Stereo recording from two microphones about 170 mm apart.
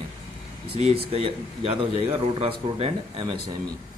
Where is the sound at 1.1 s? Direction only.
35° right (ahead or behind).